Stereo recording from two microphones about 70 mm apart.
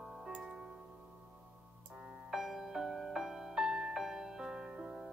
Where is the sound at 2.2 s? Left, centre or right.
Centre.